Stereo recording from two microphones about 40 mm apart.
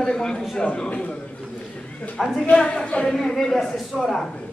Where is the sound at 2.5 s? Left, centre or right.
Left.